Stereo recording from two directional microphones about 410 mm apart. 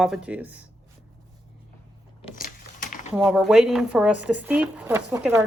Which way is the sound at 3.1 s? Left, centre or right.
Centre.